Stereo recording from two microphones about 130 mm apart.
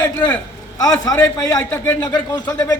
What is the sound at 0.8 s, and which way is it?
A man's voice, 30° left (ahead or behind).